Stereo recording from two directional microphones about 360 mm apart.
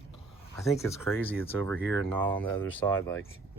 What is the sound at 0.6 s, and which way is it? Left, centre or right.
Speech, centre.